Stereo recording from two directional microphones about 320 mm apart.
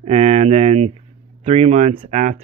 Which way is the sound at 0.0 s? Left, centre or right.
Centre.